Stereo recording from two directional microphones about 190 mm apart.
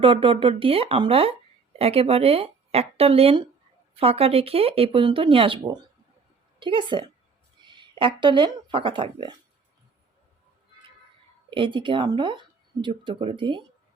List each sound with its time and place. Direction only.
0.0 s speech: 25° right (ahead or behind)
11.5 s speech: 25° right (ahead or behind)